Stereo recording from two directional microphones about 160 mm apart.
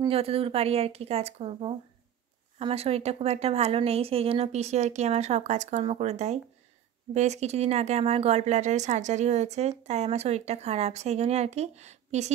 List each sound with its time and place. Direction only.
0.1 s a woman's voice: 40° right (ahead or behind)